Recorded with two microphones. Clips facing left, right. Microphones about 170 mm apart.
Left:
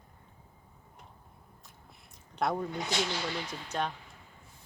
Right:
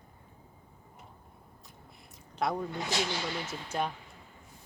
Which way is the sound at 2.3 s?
Centre (ahead or behind).